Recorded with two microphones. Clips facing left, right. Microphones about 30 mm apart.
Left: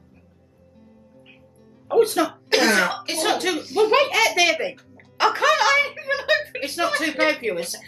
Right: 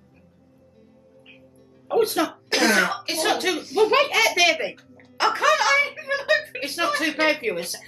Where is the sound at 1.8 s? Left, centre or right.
Centre.